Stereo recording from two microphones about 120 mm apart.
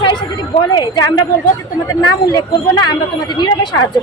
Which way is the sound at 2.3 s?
35° left (ahead or behind).